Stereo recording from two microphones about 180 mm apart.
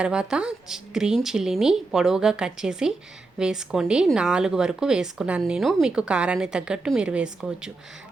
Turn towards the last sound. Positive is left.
turn(degrees=-5)  # may be behind; listen again after turning